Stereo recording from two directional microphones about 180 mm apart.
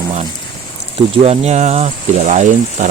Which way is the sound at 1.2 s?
35° right (ahead or behind).